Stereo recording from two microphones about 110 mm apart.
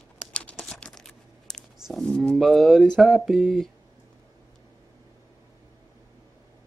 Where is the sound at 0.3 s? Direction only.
10° left (ahead or behind).